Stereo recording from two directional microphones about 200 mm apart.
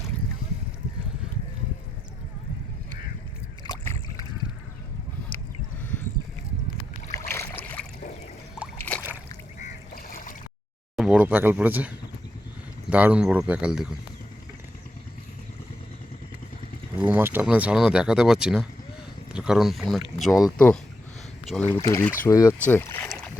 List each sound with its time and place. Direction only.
3.6 s rowboat: 15° left (ahead or behind)
7.1 s boat: 10° left (ahead or behind)
8.9 s a sound: 10° left (ahead or behind)
9.6 s goose: 40° left (ahead or behind)
10.9 s speech: 5° right (ahead or behind)
17.0 s speech: 10° right (ahead or behind)
21.7 s speech: 15° left (ahead or behind)